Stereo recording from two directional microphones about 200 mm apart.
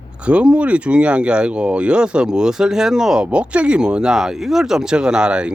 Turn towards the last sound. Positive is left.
turn(degrees=-5)  # may be behind; listen again after turning